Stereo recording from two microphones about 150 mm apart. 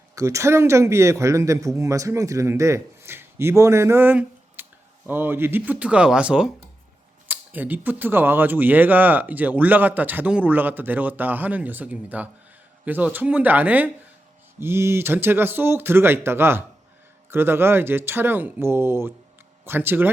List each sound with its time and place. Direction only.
0.2 s speech: 20° right (ahead or behind)